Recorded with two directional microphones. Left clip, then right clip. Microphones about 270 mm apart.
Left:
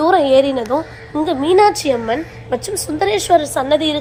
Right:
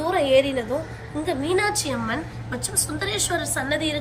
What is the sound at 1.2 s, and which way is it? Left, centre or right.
A woman's voice, centre.